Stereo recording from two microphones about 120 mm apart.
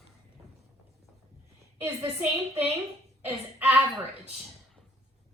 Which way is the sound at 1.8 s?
25° right (ahead or behind).